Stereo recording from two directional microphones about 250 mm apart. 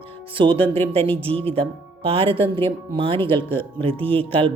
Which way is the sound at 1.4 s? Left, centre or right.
Right.